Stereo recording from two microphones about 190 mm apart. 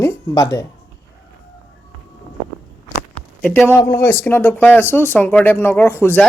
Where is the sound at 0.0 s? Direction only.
20° left (ahead or behind).